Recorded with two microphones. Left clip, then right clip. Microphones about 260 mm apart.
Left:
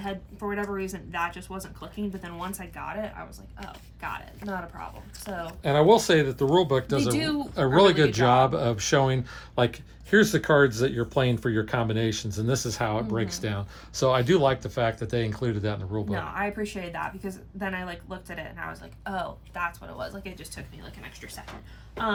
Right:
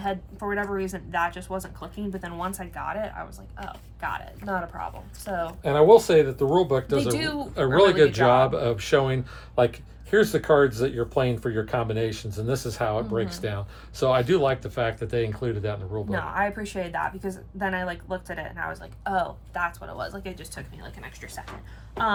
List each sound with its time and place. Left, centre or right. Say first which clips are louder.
0.0 s a woman's voice: right 4 dB; centre
4.4 s a woman's voice: right 6 dB; centre
5.6 s speech: right 3 dB; left
16.1 s a woman's voice: right 5 dB; centre